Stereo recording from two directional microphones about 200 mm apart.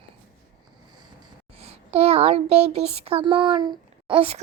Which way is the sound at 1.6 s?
30° right (ahead or behind).